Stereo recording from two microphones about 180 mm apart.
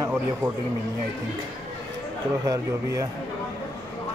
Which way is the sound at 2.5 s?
20° right (ahead or behind).